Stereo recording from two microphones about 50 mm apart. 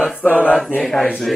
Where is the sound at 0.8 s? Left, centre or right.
Centre.